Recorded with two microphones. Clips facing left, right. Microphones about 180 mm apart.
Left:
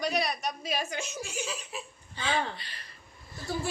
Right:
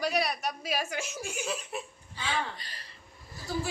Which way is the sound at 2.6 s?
40° right (ahead or behind).